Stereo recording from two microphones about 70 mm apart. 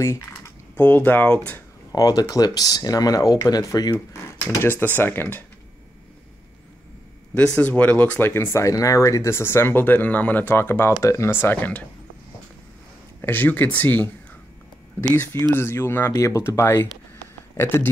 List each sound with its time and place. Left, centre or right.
0.0 s speech: left
0.7 s speech: left
1.9 s speech: left
4.6 s speech: left
7.3 s speech: centre
8.3 s speech: left
10.5 s speech: left
13.2 s speech: left
15.5 s speech: left
16.1 s speech: left
16.8 s a sound: left